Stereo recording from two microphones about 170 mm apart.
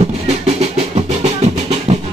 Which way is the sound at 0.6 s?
40° right (ahead or behind).